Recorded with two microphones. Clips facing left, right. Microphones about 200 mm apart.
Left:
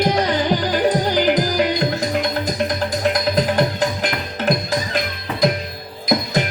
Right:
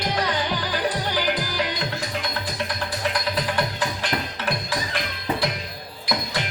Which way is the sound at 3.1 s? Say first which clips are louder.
Left 8 dB; 40° left (ahead or behind).